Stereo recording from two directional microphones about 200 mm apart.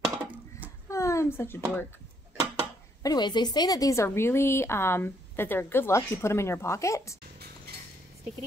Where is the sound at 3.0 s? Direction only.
20° left (ahead or behind).